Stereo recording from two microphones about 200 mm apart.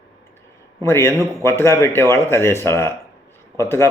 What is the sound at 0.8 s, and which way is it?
Speech, 15° left (ahead or behind).